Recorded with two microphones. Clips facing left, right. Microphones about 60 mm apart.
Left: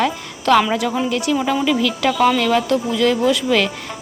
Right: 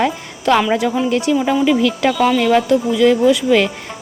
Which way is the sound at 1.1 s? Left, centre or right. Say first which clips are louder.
Right 3 dB; right.